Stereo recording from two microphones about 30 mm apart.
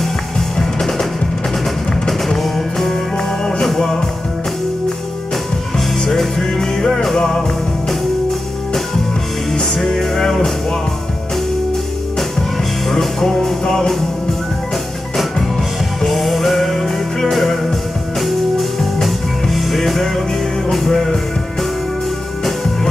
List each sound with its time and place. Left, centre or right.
0.0 s music: centre
2.0 s music: centre
3.2 s music: centre
5.8 s music: centre
8.3 s music: centre
12.2 s music: centre
16.0 s music: centre